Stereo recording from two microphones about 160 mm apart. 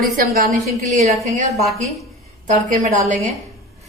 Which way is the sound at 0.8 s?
50° right (ahead or behind).